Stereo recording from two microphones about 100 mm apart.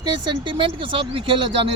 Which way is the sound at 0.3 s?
55° right (ahead or behind).